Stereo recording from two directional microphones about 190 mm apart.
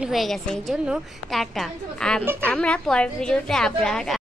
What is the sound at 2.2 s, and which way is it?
Speech, 10° right (ahead or behind).